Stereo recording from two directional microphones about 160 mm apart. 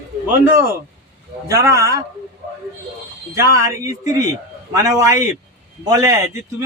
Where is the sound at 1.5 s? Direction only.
20° right (ahead or behind).